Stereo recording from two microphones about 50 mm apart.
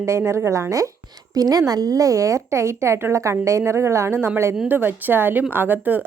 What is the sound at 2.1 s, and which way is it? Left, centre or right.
A woman's voice, right.